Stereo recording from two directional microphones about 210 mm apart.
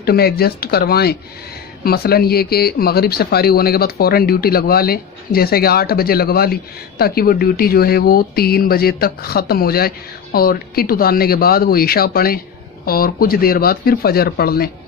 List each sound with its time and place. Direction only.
0.0 s speech: 50° left (ahead or behind)